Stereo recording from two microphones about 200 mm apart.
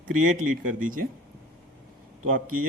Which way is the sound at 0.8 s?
45° right (ahead or behind).